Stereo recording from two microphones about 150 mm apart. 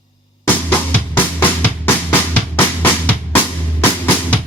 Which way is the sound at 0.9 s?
10° left (ahead or behind).